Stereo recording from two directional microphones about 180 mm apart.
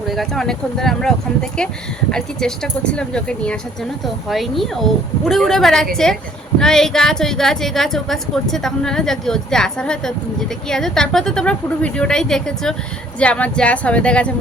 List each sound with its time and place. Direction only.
0.1 s a woman's voice: centre (ahead or behind)